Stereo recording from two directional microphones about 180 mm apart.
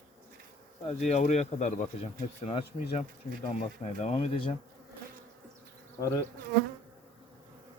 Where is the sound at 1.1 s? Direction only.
40° left (ahead or behind).